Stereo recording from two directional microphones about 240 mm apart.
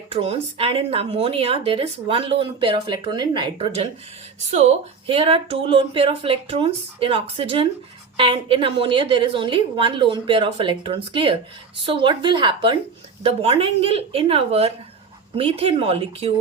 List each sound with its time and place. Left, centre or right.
0.1 s speech: right